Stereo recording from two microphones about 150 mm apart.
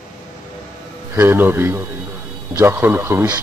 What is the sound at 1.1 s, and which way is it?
Speech, 15° right (ahead or behind).